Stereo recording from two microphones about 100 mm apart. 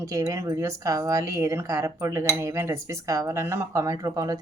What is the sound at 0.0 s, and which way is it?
A woman's voice, 35° right (ahead or behind).